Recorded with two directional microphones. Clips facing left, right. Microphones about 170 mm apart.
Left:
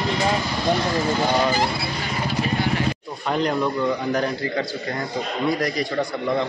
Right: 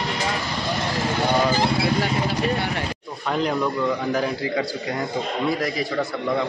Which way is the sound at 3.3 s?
Centre (ahead or behind).